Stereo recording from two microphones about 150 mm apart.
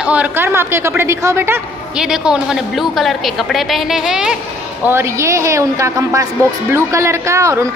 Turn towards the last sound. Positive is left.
turn(degrees=-20)  # may be behind; listen again after turning